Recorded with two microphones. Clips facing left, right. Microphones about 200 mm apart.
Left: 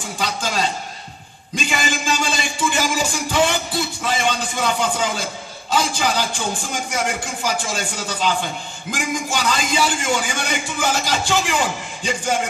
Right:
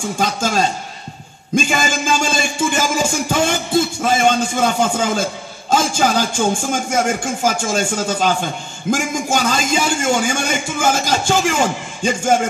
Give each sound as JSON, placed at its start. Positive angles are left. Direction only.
{"t": 0.2, "sound": "a man's voice", "side_deg": -45}
{"t": 1.5, "sound": "music", "side_deg": -45}
{"t": 5.7, "sound": "a man's voice", "side_deg": -45}